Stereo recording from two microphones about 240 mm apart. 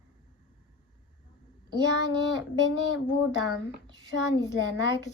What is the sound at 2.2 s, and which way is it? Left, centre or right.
Speech, left.